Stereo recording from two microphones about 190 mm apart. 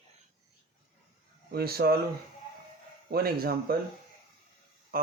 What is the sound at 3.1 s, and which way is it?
Speech, 55° right (ahead or behind).